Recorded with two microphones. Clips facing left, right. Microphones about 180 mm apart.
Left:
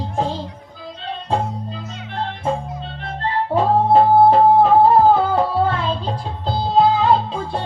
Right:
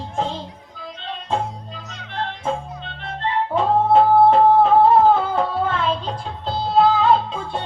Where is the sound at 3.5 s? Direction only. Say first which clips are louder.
Left 2 dB; 35° left (ahead or behind).